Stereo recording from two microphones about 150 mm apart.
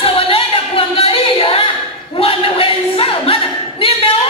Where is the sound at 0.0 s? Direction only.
40° left (ahead or behind).